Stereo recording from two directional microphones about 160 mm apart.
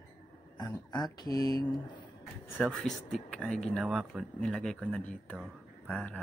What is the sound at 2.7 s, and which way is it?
Speech, centre (ahead or behind).